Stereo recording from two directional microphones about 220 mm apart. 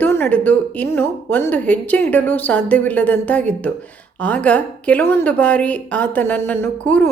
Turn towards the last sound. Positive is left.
turn(degrees=10)  # may be behind; listen again after turning